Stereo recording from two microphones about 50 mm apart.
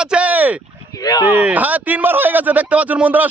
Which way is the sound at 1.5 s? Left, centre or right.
Right.